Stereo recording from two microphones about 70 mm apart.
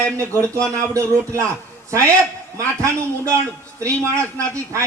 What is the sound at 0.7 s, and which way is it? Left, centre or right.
A man's voice, right.